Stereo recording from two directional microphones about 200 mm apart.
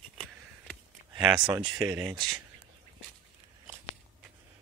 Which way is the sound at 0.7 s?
5° right (ahead or behind).